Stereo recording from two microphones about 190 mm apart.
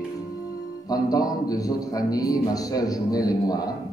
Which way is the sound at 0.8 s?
20° left (ahead or behind).